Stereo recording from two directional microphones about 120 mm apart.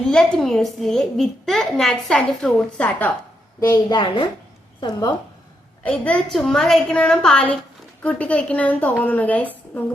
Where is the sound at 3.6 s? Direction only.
25° left (ahead or behind).